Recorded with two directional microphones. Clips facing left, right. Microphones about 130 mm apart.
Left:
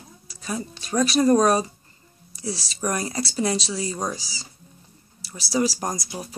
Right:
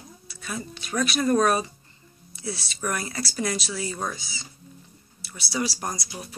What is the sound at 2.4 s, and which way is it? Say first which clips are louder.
Speech: left 3 dB; 35° left (ahead or behind).